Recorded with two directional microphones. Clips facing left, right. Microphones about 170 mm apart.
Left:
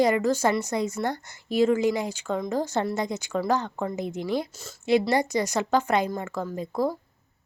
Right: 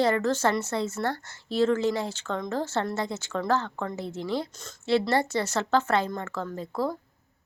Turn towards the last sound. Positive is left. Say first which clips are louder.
# left 3 dB
turn(degrees=15)  # may be behind; listen again after turning